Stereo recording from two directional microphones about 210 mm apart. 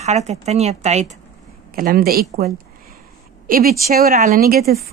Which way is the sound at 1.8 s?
45° right (ahead or behind).